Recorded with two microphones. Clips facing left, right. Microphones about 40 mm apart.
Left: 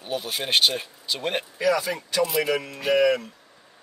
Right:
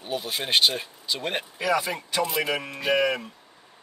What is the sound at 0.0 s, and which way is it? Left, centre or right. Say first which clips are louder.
Speech: left 1 dB; centre.